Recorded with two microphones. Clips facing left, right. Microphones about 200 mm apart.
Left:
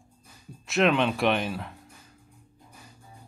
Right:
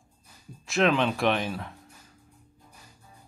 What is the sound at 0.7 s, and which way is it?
Speech, centre (ahead or behind).